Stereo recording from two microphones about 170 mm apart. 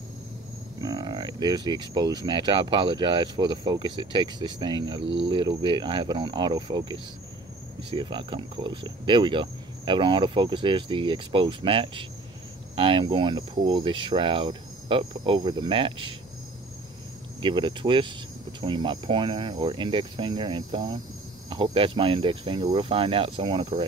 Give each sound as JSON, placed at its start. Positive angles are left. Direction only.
{"t": 0.7, "sound": "speech", "side_deg": -20}
{"t": 5.0, "sound": "speech", "side_deg": -90}
{"t": 5.3, "sound": "speech", "side_deg": -25}
{"t": 17.4, "sound": "speech", "side_deg": -30}